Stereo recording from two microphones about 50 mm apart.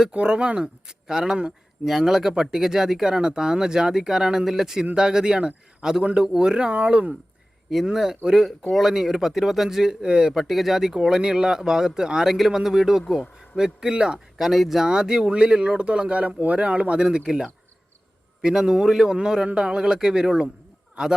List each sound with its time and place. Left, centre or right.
0.1 s speech: right
1.9 s speech: centre; by 7.1 s right
7.9 s speech: centre
8.4 s speech: centre
10.3 s speech: centre
13.8 s speech: centre
14.3 s speech: centre
14.8 s speech: centre